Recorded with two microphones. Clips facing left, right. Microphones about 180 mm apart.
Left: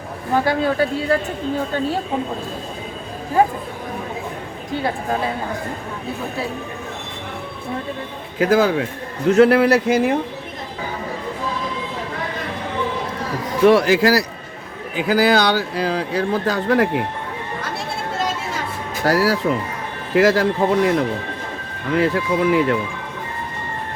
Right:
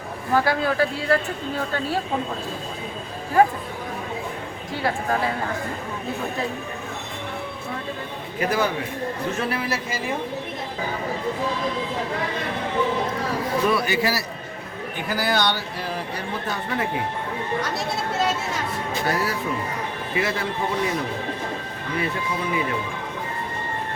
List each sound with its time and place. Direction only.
0.3 s speech: 20° left (ahead or behind)
8.4 s speech: 90° left
9.3 s speech: 75° left (ahead or behind)
13.7 s speech: 90° left; by 17.0 s 75° left (ahead or behind)
19.0 s speech: 90° left
21.9 s speech: 90° left